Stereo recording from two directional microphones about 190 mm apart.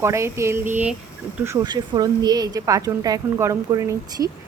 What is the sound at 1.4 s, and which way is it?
A woman's voice, 20° right (ahead or behind).